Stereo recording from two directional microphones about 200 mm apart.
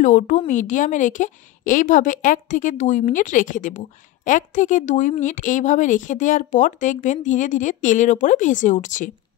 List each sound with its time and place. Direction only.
0.0 s a woman's voice: 40° left (ahead or behind)